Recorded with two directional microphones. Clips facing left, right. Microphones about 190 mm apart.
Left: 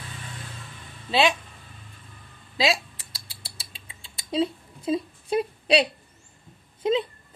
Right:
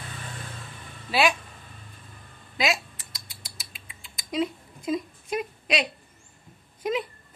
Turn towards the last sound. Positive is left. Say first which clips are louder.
# left 4 dB
turn(degrees=25)  # may be behind; listen again after turning